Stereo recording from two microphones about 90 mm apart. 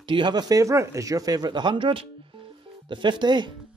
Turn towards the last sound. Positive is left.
turn(degrees=-55)  # may be behind; listen again after turning